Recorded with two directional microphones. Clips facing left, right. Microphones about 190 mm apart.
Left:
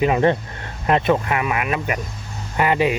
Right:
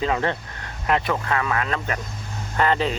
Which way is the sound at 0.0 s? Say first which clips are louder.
Left 6 dB; 20° left (ahead or behind).